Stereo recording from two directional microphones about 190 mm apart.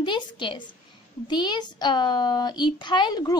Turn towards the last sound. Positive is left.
turn(degrees=20)  # may be behind; listen again after turning